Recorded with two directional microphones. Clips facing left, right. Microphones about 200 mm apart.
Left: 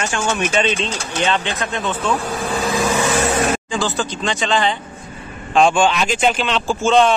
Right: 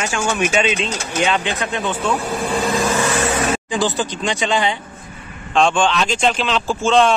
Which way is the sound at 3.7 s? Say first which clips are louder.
Right 1 dB; 15° right (ahead or behind).